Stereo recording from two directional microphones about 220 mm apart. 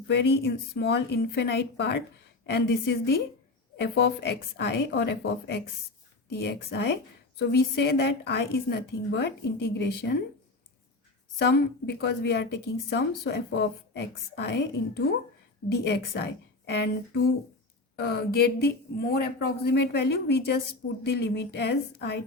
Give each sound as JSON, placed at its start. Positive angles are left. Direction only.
{"t": 0.1, "sound": "a woman's voice", "side_deg": 50}
{"t": 11.3, "sound": "a woman's voice", "side_deg": 50}
{"t": 17.9, "sound": "a woman's voice", "side_deg": 45}